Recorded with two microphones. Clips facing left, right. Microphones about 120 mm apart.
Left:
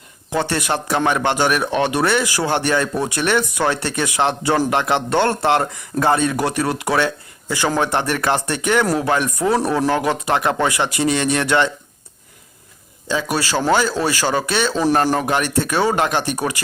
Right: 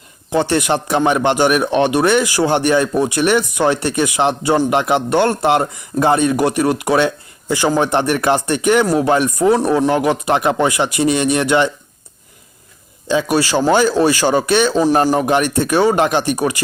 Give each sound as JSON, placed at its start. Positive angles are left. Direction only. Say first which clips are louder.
{"t": 0.3, "sound": "speech", "louder": "right 5 dB", "side_deg": -20}
{"t": 13.1, "sound": "speech", "louder": "right 5 dB", "side_deg": -20}